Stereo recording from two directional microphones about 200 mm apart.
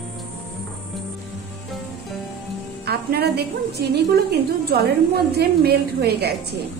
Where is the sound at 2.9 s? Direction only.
50° right (ahead or behind).